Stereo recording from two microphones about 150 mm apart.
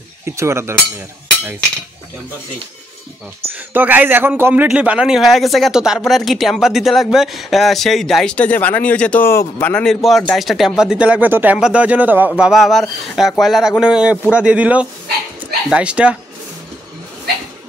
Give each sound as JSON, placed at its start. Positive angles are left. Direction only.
{"t": 0.2, "sound": "speech", "side_deg": -15}
{"t": 3.5, "sound": "a man's voice", "side_deg": -10}